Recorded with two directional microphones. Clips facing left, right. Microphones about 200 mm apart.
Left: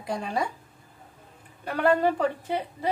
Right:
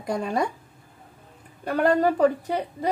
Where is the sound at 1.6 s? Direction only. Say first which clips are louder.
Right 2 dB; 40° right (ahead or behind).